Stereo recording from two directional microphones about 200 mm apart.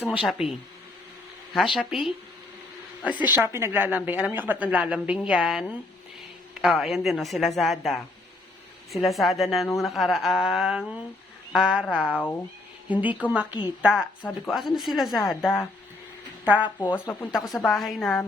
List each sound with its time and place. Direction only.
0.1 s a woman's voice: 5° right (ahead or behind)
1.5 s a woman's voice: centre (ahead or behind)
12.0 s speech: 10° left (ahead or behind)
12.9 s a woman's voice: 10° right (ahead or behind)
15.4 s speech: 10° left (ahead or behind)
16.5 s a woman's voice: 5° right (ahead or behind)
16.9 s speech: 15° left (ahead or behind)
17.3 s a woman's voice: centre (ahead or behind)